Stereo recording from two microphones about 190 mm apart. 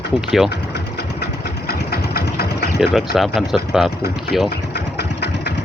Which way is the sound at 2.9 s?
Centre (ahead or behind).